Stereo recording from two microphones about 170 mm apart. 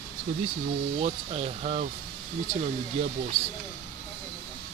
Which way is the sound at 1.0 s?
35° right (ahead or behind).